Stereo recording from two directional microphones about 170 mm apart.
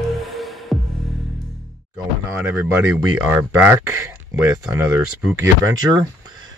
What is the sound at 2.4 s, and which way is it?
Speech, 15° right (ahead or behind).